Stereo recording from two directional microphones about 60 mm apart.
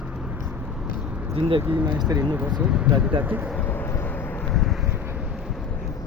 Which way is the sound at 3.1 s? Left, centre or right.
Right.